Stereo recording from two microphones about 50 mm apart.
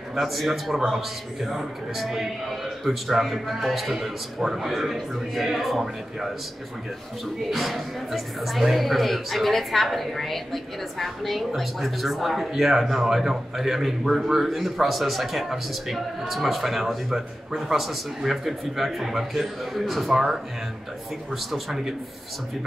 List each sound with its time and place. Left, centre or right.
0.1 s speech: centre
7.5 s speech: centre